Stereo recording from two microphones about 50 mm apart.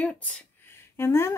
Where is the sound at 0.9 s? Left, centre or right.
Left.